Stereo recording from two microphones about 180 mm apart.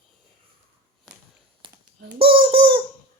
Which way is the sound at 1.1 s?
Centre (ahead or behind).